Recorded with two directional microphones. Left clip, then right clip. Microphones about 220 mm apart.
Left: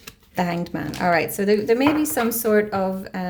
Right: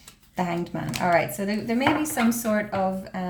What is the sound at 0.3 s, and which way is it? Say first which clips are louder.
A woman's voice: left 3 dB; 45° left (ahead or behind).